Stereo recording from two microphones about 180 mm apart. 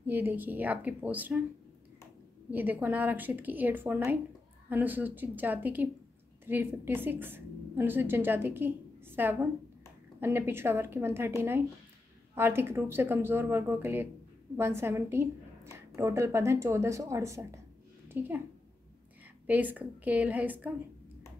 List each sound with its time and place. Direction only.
0.0 s a woman's voice: 10° right (ahead or behind)
2.5 s a woman's voice: 10° right (ahead or behind)
19.4 s a woman's voice: 10° right (ahead or behind)